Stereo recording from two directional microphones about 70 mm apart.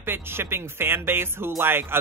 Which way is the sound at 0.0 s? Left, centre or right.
Right.